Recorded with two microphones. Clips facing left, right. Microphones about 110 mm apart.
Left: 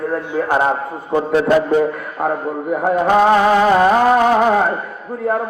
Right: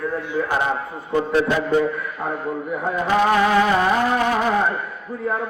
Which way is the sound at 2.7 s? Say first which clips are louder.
Left 7 dB; 55° left (ahead or behind).